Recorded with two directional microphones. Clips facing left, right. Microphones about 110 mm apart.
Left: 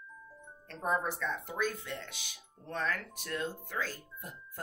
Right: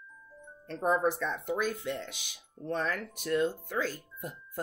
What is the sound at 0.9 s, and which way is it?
Speech, 20° right (ahead or behind).